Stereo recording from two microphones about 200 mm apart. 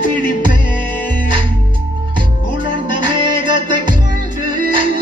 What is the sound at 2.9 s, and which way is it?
Music, 25° right (ahead or behind).